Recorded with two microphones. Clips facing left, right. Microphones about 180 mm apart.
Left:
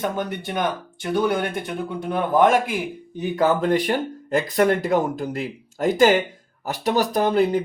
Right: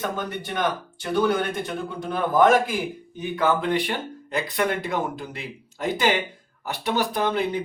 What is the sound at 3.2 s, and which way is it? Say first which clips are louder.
Speech: left 3 dB; 40° left (ahead or behind).